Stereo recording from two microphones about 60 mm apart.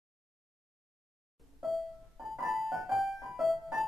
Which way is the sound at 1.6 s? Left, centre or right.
Centre.